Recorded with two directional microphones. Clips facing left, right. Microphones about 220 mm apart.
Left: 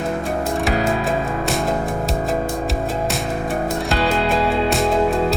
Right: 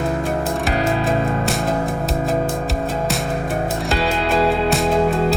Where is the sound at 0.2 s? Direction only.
Centre (ahead or behind).